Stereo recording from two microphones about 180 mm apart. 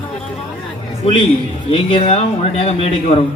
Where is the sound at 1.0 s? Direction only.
35° left (ahead or behind).